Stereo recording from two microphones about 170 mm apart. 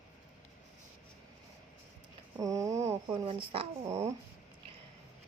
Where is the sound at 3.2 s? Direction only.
30° right (ahead or behind).